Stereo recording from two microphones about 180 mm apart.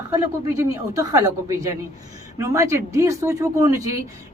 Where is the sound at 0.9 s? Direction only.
20° right (ahead or behind).